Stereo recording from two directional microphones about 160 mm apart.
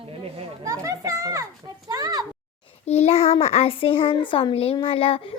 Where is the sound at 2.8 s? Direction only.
40° left (ahead or behind).